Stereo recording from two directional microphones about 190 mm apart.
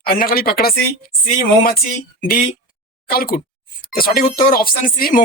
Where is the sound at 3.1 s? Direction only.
50° left (ahead or behind).